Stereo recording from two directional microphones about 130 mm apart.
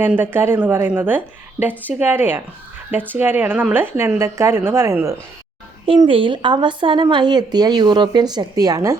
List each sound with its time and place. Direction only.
0.0 s a woman's voice: 15° right (ahead or behind)
6.1 s speech: 40° right (ahead or behind)